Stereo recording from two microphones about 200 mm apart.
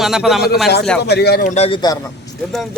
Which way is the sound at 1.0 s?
55° left (ahead or behind).